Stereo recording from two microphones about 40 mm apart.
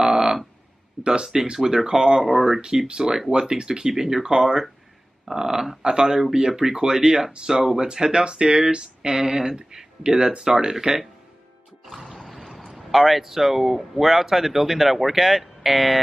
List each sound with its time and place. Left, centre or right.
0.0 s a sound: centre
1.0 s speech: centre
11.8 s speech: centre